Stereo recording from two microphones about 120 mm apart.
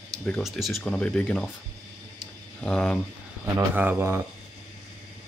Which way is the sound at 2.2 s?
5° left (ahead or behind).